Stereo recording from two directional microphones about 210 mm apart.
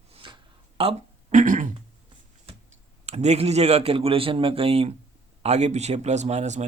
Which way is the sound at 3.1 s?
30° right (ahead or behind).